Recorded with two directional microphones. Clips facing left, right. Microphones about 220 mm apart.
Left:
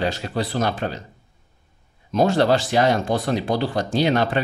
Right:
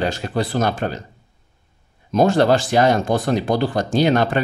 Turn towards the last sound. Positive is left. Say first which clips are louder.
# right 3 dB
turn(degrees=-45)  # may be behind; listen again after turning